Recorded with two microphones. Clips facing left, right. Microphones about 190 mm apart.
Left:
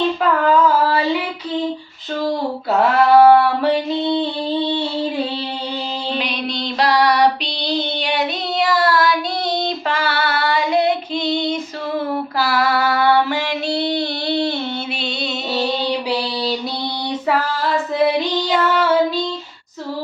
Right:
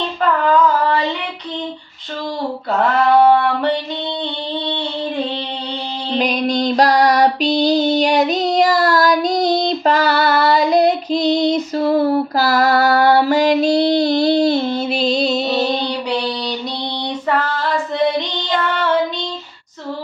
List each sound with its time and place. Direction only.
2.8 s a sound: 5° left (ahead or behind)
6.1 s female singing: 45° right (ahead or behind)
15.9 s child singing: 5° left (ahead or behind)